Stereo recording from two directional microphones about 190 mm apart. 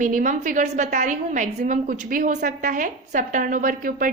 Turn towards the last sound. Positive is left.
turn(degrees=-45)  # may be behind; listen again after turning